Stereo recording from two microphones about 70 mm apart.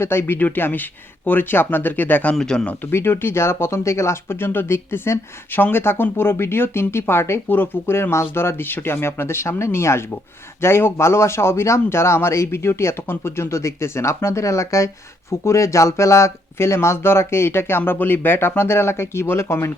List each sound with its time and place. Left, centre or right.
0.0 s speech: left
2.3 s speech: centre
2.9 s speech: left